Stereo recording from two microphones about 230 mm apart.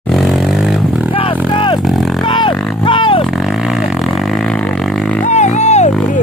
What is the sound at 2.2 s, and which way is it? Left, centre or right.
Music, left.